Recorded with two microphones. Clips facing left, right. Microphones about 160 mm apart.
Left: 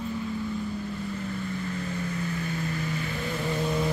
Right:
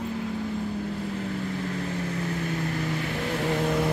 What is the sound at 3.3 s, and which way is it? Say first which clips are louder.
Vehicle: right 4 dB; 70° right (ahead or behind).